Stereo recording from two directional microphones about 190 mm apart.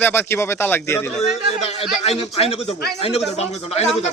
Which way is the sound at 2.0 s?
30° left (ahead or behind).